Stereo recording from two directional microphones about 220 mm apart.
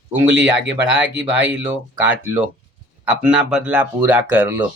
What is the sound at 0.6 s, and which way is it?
Speech, 55° right (ahead or behind).